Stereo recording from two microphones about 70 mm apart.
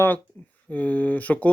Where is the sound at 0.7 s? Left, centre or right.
Left.